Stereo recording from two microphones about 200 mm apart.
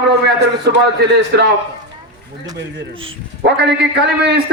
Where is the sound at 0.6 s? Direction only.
55° right (ahead or behind).